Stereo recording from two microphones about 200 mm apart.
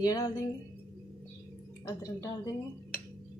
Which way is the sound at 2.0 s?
15° left (ahead or behind).